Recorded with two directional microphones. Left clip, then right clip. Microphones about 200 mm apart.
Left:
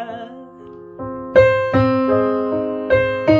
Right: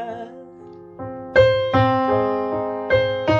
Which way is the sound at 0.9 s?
15° left (ahead or behind).